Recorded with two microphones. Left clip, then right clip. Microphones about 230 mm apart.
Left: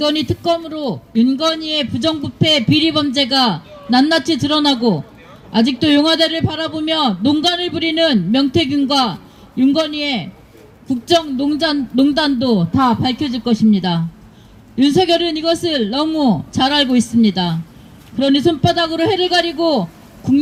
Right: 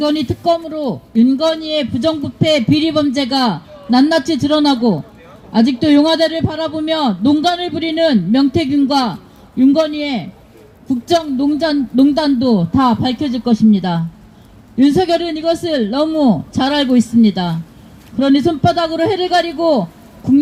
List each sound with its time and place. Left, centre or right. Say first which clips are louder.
0.0 s a man's voice: right 1 dB; left